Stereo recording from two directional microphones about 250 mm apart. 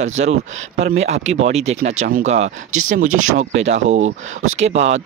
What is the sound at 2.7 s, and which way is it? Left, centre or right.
Speech, right.